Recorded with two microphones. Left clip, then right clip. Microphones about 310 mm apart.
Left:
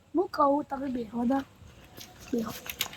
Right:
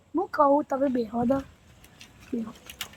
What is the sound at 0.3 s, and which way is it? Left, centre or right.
Speech, centre.